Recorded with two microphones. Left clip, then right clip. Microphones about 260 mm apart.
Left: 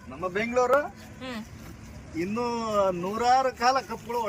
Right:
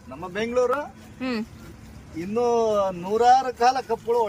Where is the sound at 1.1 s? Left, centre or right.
Right.